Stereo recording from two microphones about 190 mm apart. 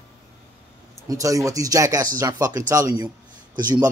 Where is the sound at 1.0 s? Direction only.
15° right (ahead or behind).